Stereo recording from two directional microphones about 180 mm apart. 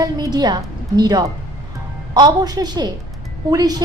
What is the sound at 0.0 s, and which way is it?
A woman's voice, 20° right (ahead or behind).